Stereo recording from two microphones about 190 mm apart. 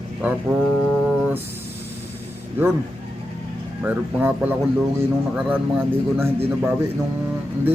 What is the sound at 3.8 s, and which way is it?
A man's voice, 10° right (ahead or behind).